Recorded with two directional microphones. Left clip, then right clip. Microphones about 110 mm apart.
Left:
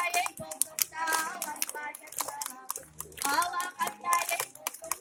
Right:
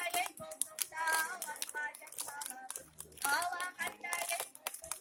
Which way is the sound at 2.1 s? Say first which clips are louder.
Left 8 dB; centre (ahead or behind).